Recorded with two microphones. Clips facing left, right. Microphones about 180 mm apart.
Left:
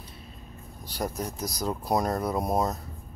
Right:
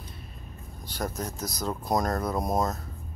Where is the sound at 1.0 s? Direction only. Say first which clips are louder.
Left 1 dB; 10° left (ahead or behind).